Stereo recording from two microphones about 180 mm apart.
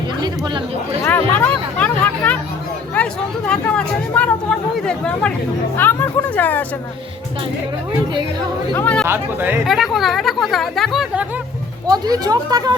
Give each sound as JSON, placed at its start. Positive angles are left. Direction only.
{"t": 1.0, "sound": "speech", "side_deg": 10}
{"t": 8.7, "sound": "speech", "side_deg": 10}
{"t": 9.0, "sound": "speech", "side_deg": -10}
{"t": 9.6, "sound": "speech", "side_deg": 0}
{"t": 11.9, "sound": "speech", "side_deg": -20}